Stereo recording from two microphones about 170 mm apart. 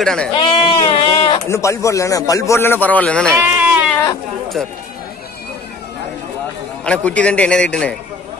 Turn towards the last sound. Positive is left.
turn(degrees=5)  # may be behind; listen again after turning